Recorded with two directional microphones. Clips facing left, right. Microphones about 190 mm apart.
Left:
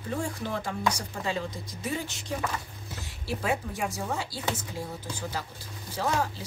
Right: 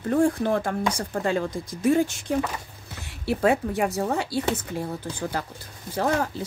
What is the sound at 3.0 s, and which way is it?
Speech, 60° right (ahead or behind).